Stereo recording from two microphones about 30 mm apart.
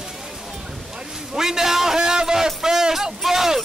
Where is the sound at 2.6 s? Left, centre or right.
Right.